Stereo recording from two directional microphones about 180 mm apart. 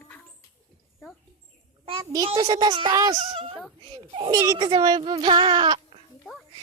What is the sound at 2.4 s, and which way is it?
Speech, 25° right (ahead or behind).